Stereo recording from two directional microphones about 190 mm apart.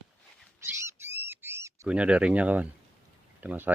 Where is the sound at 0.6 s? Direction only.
15° right (ahead or behind).